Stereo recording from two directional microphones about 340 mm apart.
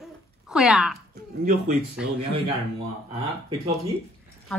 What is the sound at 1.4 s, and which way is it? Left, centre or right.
Speech, right.